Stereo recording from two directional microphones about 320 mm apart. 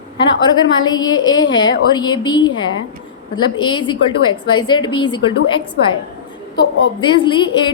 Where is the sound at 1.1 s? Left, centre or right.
Left.